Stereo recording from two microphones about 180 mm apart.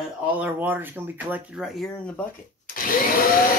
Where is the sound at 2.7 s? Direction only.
50° left (ahead or behind).